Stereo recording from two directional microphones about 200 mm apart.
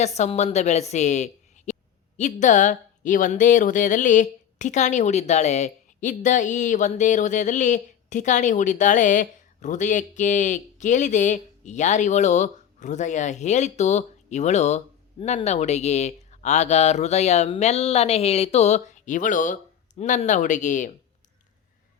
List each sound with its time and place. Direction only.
0.0 s speech: 35° left (ahead or behind)